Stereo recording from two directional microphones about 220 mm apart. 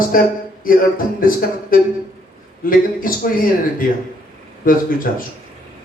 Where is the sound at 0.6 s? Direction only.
40° left (ahead or behind).